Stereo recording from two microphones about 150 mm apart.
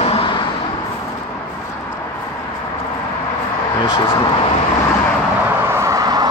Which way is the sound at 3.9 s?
35° left (ahead or behind).